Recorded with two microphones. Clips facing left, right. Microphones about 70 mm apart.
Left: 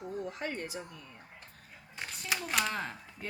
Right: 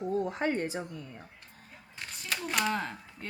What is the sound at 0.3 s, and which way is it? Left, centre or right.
Speech, right.